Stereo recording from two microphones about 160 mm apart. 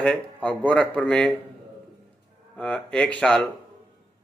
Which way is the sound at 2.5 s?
5° left (ahead or behind).